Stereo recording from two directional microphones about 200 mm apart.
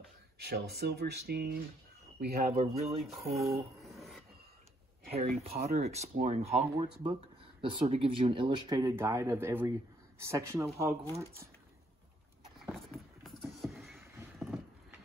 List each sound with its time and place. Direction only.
0.4 s speech: 50° right (ahead or behind)
2.5 s speech: 30° right (ahead or behind)
3.0 s a sound: centre (ahead or behind)
3.9 s filing: centre (ahead or behind)
5.2 s speech: 50° right (ahead or behind)
5.9 s speech: 35° right (ahead or behind); by 10.7 s 15° right (ahead or behind)
12.6 s a sound: centre (ahead or behind)